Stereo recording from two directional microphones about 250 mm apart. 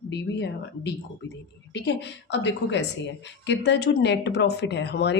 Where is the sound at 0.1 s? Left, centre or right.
Left.